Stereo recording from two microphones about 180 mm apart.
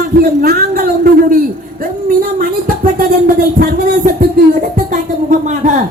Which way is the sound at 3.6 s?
55° right (ahead or behind).